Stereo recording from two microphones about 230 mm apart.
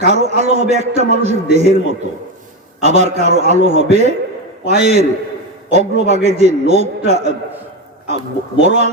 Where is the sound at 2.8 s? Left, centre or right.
Right.